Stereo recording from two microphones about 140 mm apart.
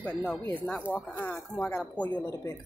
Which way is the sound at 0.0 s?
10° left (ahead or behind).